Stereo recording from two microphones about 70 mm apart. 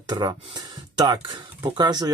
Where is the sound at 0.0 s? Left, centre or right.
Right.